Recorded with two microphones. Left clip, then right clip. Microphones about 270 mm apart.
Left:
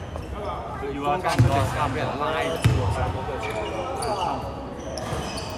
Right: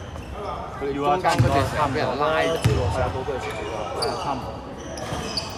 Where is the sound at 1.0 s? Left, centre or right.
Right.